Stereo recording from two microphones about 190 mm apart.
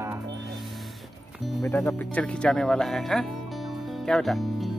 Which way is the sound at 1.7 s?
15° left (ahead or behind).